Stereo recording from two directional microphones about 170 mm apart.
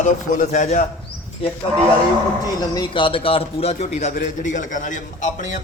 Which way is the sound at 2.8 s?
30° left (ahead or behind).